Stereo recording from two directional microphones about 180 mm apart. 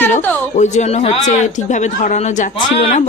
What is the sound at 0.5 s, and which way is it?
Speech, 40° left (ahead or behind).